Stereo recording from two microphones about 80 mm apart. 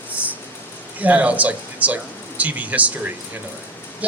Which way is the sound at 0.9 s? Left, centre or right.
Centre.